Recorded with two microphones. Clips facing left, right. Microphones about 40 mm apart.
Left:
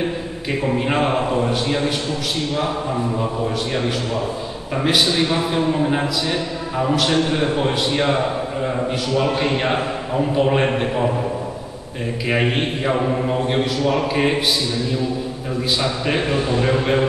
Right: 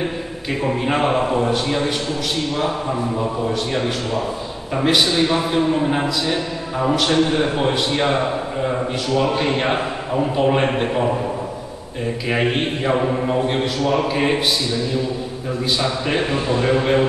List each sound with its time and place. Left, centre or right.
0.7 s a man's voice: centre
3.7 s a man's voice: centre
12.3 s a man's voice: centre
15.8 s a man's voice: centre